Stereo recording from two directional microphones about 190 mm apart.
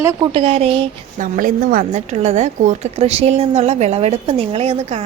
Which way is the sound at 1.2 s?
45° right (ahead or behind).